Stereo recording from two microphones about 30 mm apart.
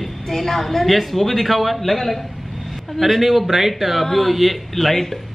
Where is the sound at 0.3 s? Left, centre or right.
Centre.